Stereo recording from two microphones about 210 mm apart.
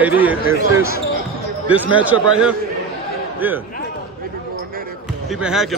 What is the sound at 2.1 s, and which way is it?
Speech, 70° right (ahead or behind).